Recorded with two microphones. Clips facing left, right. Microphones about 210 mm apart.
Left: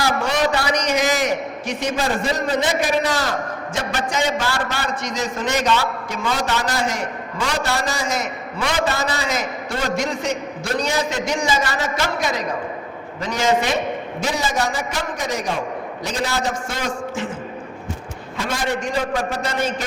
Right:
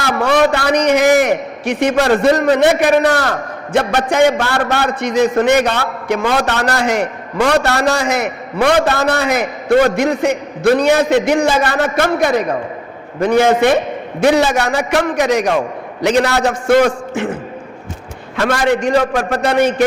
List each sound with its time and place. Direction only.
0.0 s a man's voice: 60° right (ahead or behind)
18.3 s a man's voice: 75° right (ahead or behind)